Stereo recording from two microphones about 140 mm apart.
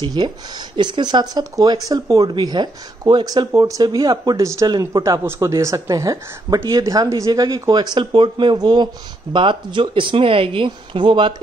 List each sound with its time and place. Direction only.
0.0 s speech: 30° right (ahead or behind)